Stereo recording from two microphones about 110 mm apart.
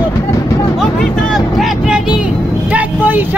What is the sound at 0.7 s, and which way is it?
Vehicle, centre (ahead or behind).